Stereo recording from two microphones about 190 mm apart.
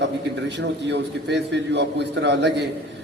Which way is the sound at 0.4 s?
65° right (ahead or behind).